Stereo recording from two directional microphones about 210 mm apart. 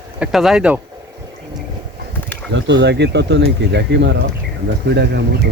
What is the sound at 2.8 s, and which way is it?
Speech, 55° right (ahead or behind).